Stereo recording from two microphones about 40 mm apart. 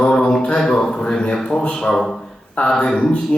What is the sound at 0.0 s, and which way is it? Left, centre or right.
Mantra, left.